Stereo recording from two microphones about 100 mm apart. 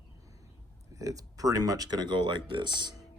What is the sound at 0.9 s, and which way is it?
Speech, 35° right (ahead or behind).